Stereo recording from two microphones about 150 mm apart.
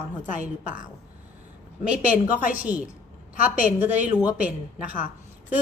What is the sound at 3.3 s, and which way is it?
Speech, 65° left (ahead or behind).